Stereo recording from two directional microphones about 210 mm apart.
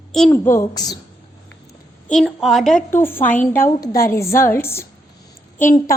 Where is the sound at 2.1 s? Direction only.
Centre (ahead or behind).